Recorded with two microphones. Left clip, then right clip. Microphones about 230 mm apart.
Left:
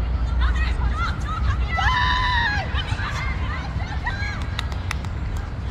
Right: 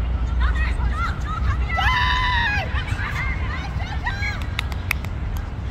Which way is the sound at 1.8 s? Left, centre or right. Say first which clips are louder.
Right 1 dB; right.